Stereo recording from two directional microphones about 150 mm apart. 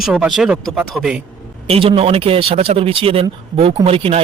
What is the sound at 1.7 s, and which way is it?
Speech, 40° right (ahead or behind).